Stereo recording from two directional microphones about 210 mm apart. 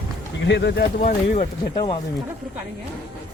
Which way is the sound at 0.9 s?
35° left (ahead or behind).